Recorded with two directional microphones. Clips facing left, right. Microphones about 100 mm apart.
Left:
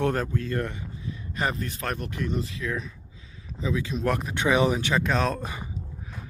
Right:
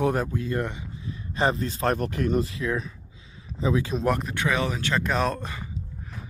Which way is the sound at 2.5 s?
35° right (ahead or behind).